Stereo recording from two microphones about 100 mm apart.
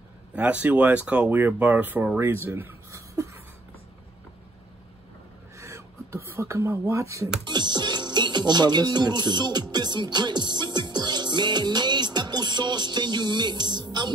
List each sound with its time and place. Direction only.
0.3 s speech: 10° right (ahead or behind)
5.6 s speech: 30° right (ahead or behind)
7.4 s speech: 50° right (ahead or behind)